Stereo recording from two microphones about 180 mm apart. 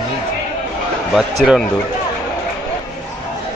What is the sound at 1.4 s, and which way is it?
Speech, centre (ahead or behind).